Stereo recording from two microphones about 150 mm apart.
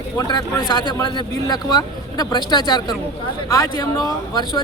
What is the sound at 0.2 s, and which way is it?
Speech, 30° left (ahead or behind).